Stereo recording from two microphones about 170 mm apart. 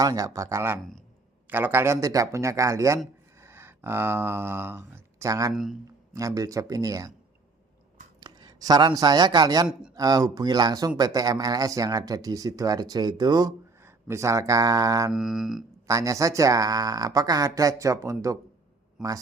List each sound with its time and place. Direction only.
0.0 s speech: 20° right (ahead or behind)
8.2 s speech: 25° right (ahead or behind)
15.1 s mantra: centre (ahead or behind)
15.9 s speech: 20° right (ahead or behind)
19.0 s mantra: 5° right (ahead or behind)